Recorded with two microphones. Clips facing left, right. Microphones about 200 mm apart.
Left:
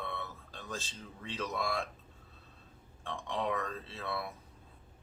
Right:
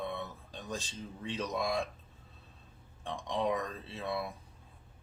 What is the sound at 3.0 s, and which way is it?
Speech, 15° right (ahead or behind).